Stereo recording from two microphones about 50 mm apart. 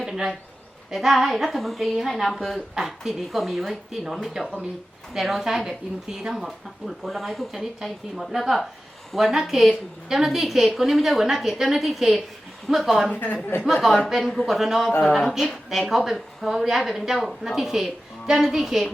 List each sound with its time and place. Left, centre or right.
0.0 s a sound: centre
0.9 s a woman's voice: centre
7.5 s a woman's voice: centre
13.1 s speech: left
14.1 s a woman's voice: centre